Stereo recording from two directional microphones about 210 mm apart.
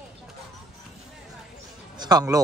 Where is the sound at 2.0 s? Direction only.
20° right (ahead or behind).